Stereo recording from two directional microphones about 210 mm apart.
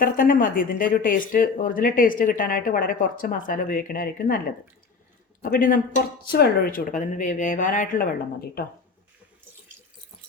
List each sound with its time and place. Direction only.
0.0 s speech: 40° left (ahead or behind)
5.4 s speech: 40° left (ahead or behind)